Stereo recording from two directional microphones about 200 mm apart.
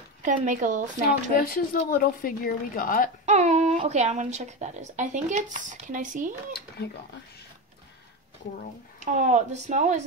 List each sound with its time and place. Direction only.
0.2 s speech: 40° right (ahead or behind)
1.3 s a woman's voice: 45° left (ahead or behind)
3.3 s speech: 35° right (ahead or behind)
9.0 s speech: 35° right (ahead or behind)